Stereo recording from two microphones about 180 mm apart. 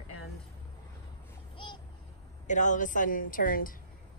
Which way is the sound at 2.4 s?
45° left (ahead or behind).